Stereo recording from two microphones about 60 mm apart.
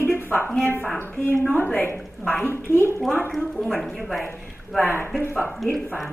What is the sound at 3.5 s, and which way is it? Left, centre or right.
Speech, centre.